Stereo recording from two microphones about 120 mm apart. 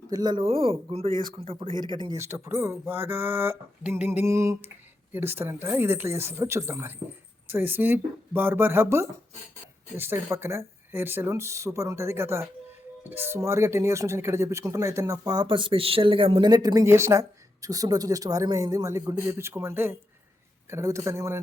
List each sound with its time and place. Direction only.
0.1 s speech: 35° right (ahead or behind)
1.8 s speech: 40° right (ahead or behind)
2.1 s speech: 20° right (ahead or behind)